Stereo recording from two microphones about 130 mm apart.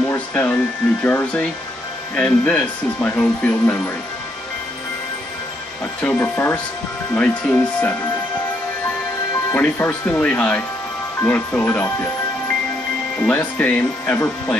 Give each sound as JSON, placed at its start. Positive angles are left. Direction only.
{"t": 0.1, "sound": "music", "side_deg": 15}
{"t": 1.0, "sound": "speech", "side_deg": 10}
{"t": 6.0, "sound": "speech", "side_deg": 15}
{"t": 9.5, "sound": "speech", "side_deg": 15}
{"t": 13.2, "sound": "speech", "side_deg": 15}